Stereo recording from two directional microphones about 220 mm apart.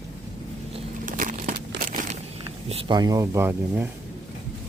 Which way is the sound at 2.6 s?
25° right (ahead or behind).